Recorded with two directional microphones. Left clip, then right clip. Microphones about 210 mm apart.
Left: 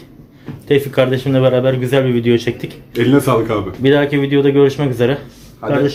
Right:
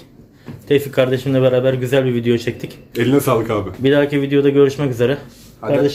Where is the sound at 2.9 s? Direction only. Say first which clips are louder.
Left 2 dB; 15° right (ahead or behind).